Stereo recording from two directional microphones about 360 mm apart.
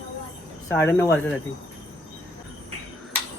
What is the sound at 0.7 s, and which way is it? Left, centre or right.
Speech, centre.